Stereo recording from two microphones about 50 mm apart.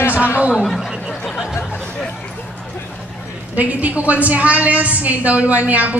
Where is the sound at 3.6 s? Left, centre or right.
Right.